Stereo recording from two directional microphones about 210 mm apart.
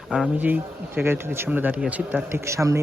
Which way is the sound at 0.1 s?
5° right (ahead or behind).